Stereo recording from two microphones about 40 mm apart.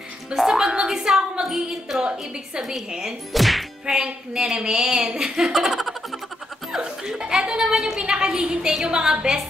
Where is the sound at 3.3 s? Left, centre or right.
Centre.